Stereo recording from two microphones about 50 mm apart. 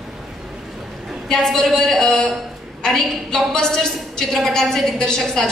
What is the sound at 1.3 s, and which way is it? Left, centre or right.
A woman's voice, centre.